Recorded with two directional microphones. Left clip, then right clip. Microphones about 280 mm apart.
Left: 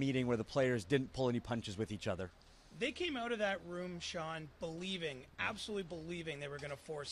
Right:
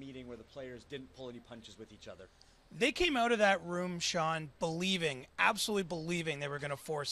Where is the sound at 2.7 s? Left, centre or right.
Right.